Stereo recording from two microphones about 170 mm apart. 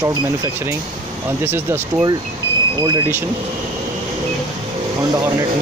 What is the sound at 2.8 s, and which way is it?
Speech, 25° right (ahead or behind).